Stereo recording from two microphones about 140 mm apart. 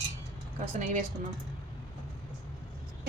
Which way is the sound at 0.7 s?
60° right (ahead or behind).